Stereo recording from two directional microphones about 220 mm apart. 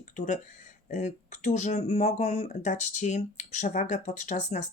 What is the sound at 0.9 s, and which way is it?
Speech, 30° left (ahead or behind).